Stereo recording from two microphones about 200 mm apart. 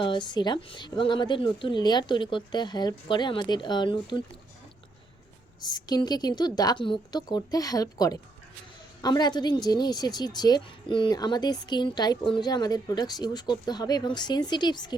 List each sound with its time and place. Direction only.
0.0 s a woman's voice: 25° left (ahead or behind)
5.5 s a woman's voice: 20° left (ahead or behind)